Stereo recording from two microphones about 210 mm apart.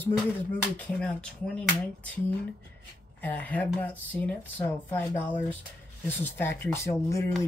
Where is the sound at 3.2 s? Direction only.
10° left (ahead or behind).